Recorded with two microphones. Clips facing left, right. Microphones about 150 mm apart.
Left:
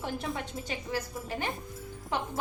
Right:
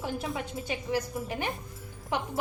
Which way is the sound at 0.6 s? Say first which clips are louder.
Right 6 dB; 15° right (ahead or behind).